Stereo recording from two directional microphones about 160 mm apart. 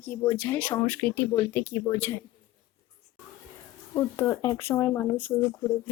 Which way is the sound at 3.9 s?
20° left (ahead or behind).